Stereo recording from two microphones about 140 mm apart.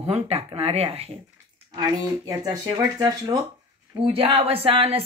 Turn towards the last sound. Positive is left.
turn(degrees=-40)  # may be behind; listen again after turning